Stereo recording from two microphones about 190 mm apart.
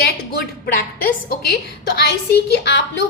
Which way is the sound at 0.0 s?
55° left (ahead or behind).